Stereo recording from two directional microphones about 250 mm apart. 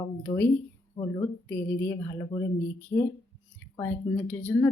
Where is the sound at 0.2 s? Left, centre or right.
Centre.